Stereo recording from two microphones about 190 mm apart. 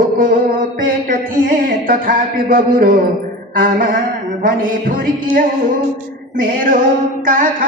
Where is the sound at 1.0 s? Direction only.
45° right (ahead or behind).